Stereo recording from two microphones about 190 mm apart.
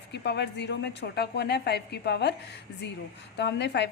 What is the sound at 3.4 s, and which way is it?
Speech, 65° left (ahead or behind).